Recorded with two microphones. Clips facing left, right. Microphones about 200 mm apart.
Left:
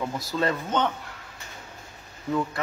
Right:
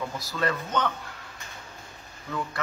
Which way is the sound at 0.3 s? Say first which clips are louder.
Left 2 dB; 25° left (ahead or behind).